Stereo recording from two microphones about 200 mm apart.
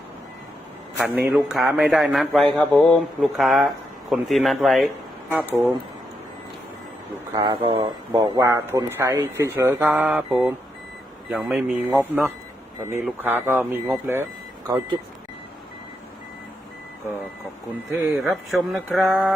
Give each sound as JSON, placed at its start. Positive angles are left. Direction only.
{"t": 0.9, "sound": "a man's voice", "side_deg": -5}
{"t": 7.3, "sound": "speech", "side_deg": -20}
{"t": 18.0, "sound": "a man's voice", "side_deg": 0}